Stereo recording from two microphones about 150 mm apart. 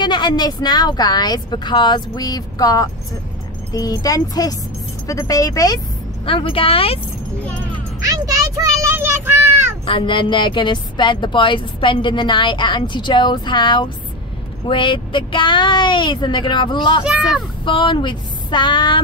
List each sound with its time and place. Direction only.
0.0 s speech: 30° left (ahead or behind)
6.2 s speech: 35° left (ahead or behind)
8.0 s a child's voice: 25° right (ahead or behind)
9.8 s speech: 35° left (ahead or behind)
17.0 s a child's voice: 5° right (ahead or behind)
17.6 s speech: 35° left (ahead or behind)